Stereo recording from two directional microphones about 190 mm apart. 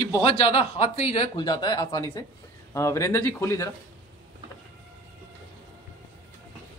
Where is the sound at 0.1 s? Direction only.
25° left (ahead or behind).